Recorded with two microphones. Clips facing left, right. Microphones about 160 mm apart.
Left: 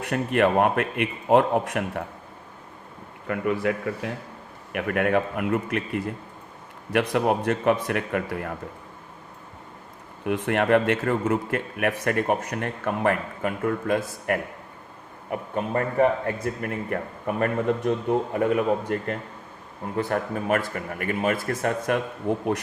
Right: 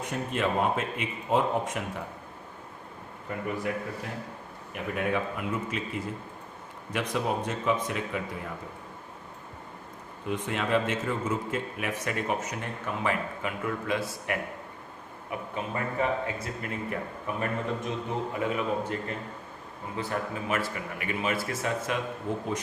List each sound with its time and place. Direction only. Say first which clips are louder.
0.0 s a man's voice: left 8 dB; 65° left (ahead or behind)
3.2 s a man's voice: left 7 dB; 90° left
4.7 s a man's voice: left 7 dB; 70° left (ahead or behind)
10.2 s a man's voice: left 8 dB; 60° left (ahead or behind)